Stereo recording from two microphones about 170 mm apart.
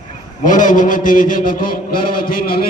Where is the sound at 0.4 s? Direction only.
50° left (ahead or behind).